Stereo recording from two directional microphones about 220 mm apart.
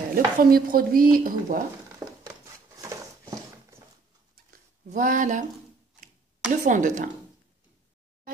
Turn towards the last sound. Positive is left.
turn(degrees=-35)  # may be behind; listen again after turning